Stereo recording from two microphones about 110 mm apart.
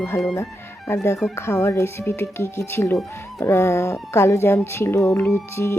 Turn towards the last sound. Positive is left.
turn(degrees=25)  # may be behind; listen again after turning